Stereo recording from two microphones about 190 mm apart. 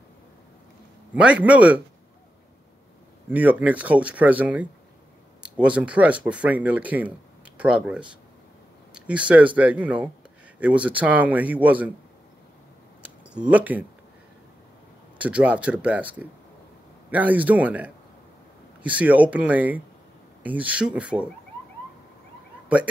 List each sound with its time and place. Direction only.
1.1 s speech: 5° right (ahead or behind)
3.3 s speech: 10° right (ahead or behind)
13.3 s speech: 5° right (ahead or behind)
15.1 s speech: 5° right (ahead or behind)